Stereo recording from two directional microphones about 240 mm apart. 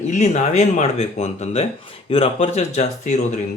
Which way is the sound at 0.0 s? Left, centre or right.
Left.